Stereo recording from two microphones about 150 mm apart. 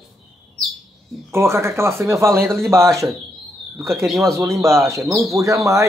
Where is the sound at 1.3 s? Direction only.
15° right (ahead or behind).